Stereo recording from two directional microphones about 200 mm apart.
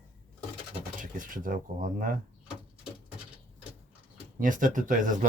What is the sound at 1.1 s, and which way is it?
Speech, 45° right (ahead or behind).